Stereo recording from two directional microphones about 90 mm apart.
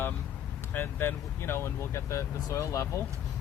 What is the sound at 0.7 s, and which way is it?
Speech, 25° left (ahead or behind).